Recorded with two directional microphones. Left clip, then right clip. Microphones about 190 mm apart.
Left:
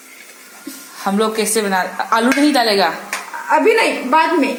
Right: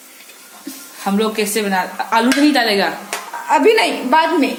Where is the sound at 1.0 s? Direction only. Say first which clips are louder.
Left 1 dB; centre (ahead or behind).